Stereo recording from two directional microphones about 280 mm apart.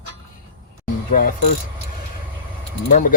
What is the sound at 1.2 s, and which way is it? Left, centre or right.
Speech, left.